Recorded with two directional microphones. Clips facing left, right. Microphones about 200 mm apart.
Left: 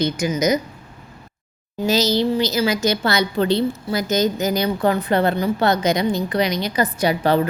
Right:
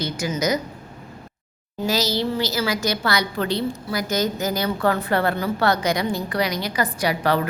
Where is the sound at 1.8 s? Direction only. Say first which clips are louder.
Left 4 dB; 20° left (ahead or behind).